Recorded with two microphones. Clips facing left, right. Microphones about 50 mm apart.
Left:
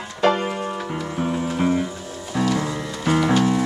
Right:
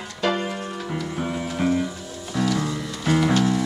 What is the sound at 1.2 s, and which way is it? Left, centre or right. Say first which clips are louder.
Music: left 4 dB; centre.